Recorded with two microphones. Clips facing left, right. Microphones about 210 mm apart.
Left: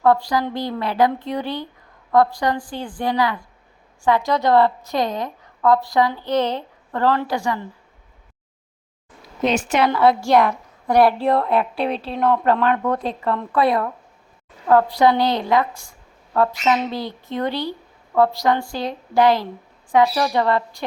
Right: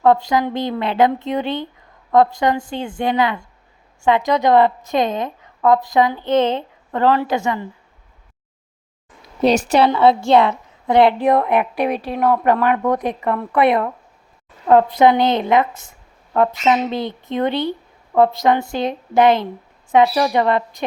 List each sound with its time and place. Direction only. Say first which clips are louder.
0.0 s a woman's voice: right 2 dB; 20° right (ahead or behind)
9.4 s a woman's voice: right 4 dB; 35° right (ahead or behind)
9.9 s a woman's voice: even; 25° right (ahead or behind)